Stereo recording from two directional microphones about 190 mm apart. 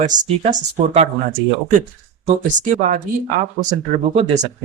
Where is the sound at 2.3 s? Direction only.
40° right (ahead or behind).